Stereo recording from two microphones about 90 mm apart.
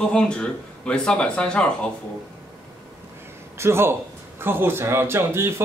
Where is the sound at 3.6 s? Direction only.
30° right (ahead or behind).